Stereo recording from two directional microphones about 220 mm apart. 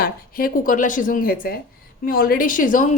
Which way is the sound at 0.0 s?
40° left (ahead or behind).